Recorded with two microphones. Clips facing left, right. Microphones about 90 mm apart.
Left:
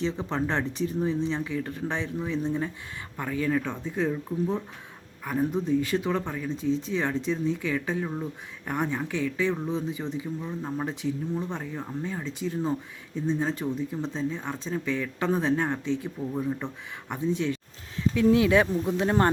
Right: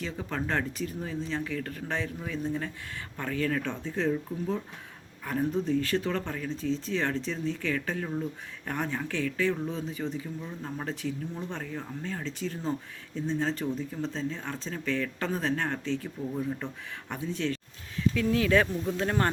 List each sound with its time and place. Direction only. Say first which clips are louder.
0.0 s speech: left 5 dB; 25° left (ahead or behind)